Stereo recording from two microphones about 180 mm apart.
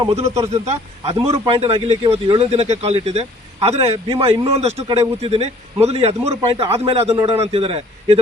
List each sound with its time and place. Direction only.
0.1 s a man's voice: 35° right (ahead or behind)